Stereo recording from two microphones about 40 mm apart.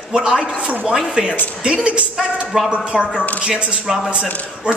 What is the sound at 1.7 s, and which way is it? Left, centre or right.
Speech, right.